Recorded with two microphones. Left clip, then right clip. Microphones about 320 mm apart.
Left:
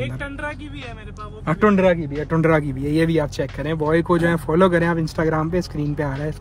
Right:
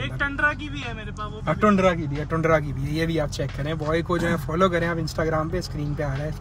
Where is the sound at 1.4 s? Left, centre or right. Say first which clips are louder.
Left 3 dB; left.